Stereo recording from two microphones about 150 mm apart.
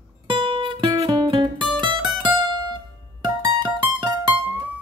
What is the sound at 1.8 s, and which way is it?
Music, 30° right (ahead or behind).